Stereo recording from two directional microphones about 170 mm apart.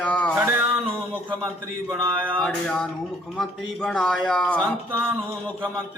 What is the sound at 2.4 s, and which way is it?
A man's voice, 5° left (ahead or behind).